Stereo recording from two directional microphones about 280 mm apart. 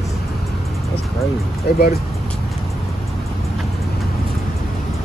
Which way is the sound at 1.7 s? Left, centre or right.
Left.